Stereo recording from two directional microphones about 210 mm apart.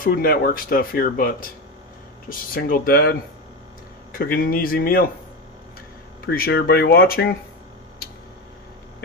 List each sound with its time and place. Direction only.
0.0 s speech: 45° left (ahead or behind)
6.2 s speech: 45° left (ahead or behind)